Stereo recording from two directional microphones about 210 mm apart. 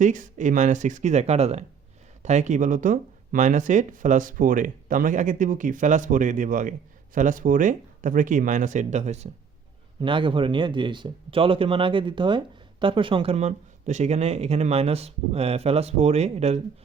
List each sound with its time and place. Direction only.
0.0 s speech: 35° right (ahead or behind)